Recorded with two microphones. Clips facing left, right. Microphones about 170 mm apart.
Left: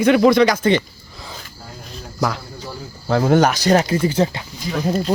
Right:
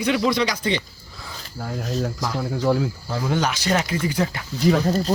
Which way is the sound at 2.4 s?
90° right.